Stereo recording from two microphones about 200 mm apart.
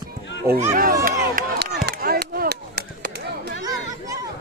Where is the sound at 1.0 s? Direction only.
50° right (ahead or behind).